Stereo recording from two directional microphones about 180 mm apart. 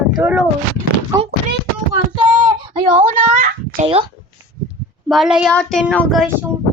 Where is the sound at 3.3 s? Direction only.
50° right (ahead or behind).